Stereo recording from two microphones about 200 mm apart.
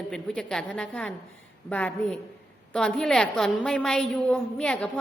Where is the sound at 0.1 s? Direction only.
5° left (ahead or behind).